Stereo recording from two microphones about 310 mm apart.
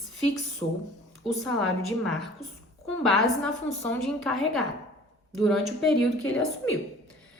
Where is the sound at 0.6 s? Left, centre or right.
Centre.